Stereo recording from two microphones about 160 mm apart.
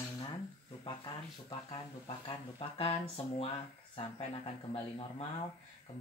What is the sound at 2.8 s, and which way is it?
Speech, 35° left (ahead or behind).